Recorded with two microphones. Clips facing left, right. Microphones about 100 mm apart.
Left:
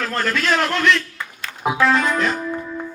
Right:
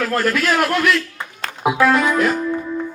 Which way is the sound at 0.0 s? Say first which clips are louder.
Right 3 dB; 10° right (ahead or behind).